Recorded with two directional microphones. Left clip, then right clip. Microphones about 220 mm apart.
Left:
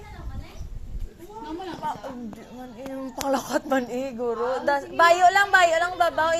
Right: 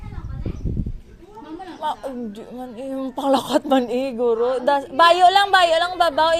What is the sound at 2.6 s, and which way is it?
Speech, 35° right (ahead or behind).